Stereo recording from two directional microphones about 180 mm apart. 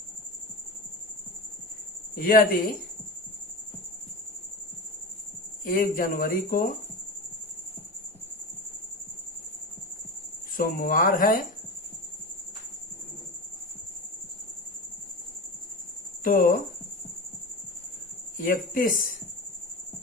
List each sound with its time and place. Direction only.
2.1 s speech: 55° left (ahead or behind)
5.6 s speech: 50° left (ahead or behind)
10.6 s speech: 50° left (ahead or behind)
16.2 s speech: 50° left (ahead or behind)
18.3 s speech: 50° left (ahead or behind)